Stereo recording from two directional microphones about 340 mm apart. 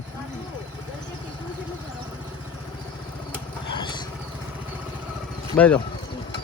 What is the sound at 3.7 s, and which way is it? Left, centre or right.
Vehicle, centre.